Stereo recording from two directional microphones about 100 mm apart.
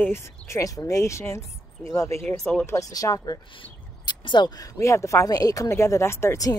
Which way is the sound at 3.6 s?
50° left (ahead or behind).